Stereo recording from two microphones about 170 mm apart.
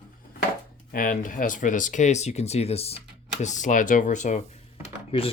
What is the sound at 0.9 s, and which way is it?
Speech, 55° left (ahead or behind).